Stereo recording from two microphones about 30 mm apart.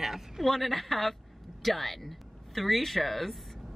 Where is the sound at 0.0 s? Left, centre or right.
Centre.